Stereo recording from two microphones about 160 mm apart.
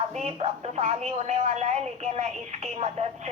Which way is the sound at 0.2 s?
45° right (ahead or behind).